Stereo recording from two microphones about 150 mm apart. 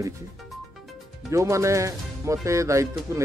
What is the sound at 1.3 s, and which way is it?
Speech, 20° right (ahead or behind).